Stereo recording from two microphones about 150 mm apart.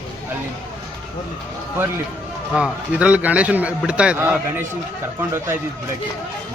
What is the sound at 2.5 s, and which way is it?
A man's voice, 5° right (ahead or behind).